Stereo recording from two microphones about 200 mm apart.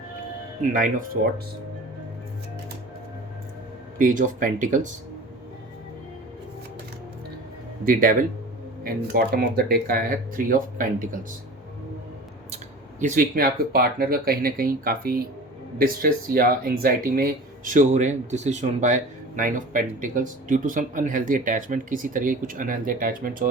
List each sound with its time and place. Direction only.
0.7 s speech: 40° right (ahead or behind)
3.9 s speech: 40° right (ahead or behind)
8.8 s speech: 50° right (ahead or behind)
13.0 s speech: 40° right (ahead or behind)